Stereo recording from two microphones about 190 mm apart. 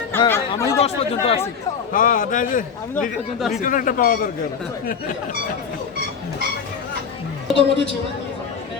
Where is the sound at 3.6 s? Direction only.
45° left (ahead or behind).